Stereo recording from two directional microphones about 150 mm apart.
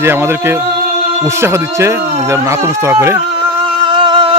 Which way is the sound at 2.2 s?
20° right (ahead or behind).